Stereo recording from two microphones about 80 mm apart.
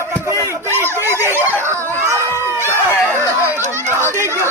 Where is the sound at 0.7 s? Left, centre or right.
Right.